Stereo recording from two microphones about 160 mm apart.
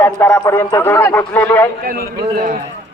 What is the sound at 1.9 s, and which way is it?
Speech, 65° right (ahead or behind).